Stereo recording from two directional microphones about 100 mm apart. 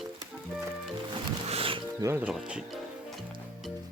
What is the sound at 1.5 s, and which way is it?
Music, 70° right (ahead or behind).